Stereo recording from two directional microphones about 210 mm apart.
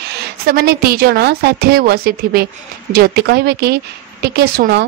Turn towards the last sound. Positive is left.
turn(degrees=-50)  # may be behind; listen again after turning